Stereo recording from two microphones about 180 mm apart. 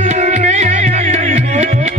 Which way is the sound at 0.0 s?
40° right (ahead or behind).